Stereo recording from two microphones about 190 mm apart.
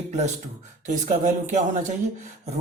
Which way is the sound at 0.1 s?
35° right (ahead or behind).